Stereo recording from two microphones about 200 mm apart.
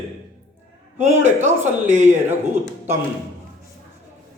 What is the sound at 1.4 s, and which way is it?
Speech, 35° right (ahead or behind).